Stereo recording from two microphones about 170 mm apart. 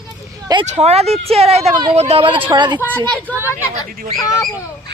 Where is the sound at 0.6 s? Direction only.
40° right (ahead or behind).